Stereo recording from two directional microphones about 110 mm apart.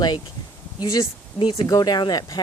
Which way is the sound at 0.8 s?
30° left (ahead or behind).